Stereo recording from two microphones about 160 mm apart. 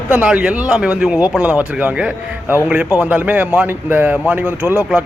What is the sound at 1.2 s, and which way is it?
Speech, 20° left (ahead or behind).